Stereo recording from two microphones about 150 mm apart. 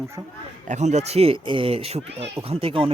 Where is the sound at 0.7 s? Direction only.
50° right (ahead or behind).